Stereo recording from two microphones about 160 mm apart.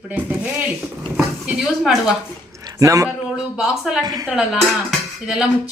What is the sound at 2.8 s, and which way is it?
Speech, 20° right (ahead or behind).